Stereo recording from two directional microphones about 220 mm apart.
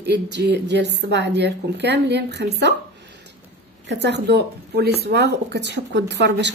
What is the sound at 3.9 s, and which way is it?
Speech, 50° right (ahead or behind).